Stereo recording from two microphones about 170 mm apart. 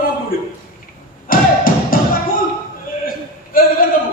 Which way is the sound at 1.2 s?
55° left (ahead or behind).